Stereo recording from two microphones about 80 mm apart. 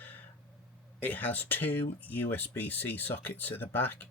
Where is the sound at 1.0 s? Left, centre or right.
Left.